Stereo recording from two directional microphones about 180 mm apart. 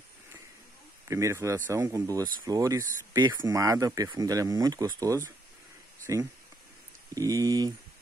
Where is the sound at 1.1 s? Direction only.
15° right (ahead or behind).